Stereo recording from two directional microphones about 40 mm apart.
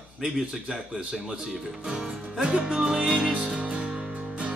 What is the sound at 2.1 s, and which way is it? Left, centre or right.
Music, centre.